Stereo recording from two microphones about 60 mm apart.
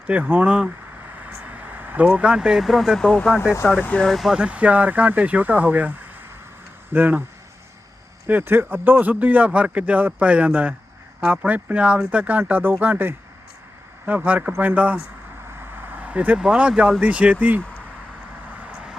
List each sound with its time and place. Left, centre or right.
0.1 s speech: right
1.1 s vehicle: right
2.6 s speech: centre
3.7 s speech: left
4.0 s speech: centre
4.3 s speech: centre
8.3 s speech: right
12.4 s speech: right
14.3 s speech: right
15.4 s vehicle: right
16.4 s speech: centre
18.5 s vehicle: right